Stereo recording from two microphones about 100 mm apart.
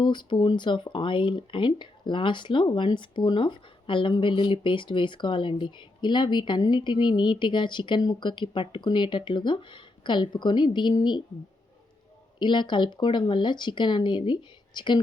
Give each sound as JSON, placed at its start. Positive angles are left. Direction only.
{"t": 0.0, "sound": "speech", "side_deg": 50}
{"t": 12.4, "sound": "speech", "side_deg": 50}